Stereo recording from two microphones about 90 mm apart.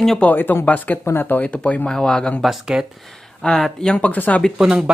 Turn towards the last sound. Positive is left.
turn(degrees=-10)  # may be behind; listen again after turning